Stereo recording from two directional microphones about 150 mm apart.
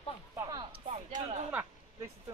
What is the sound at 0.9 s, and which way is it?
Speech, 50° right (ahead or behind).